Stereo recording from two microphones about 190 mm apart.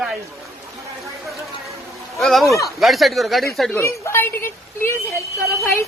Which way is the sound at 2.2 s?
Centre (ahead or behind).